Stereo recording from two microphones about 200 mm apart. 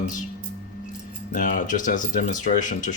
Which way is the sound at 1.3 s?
40° left (ahead or behind).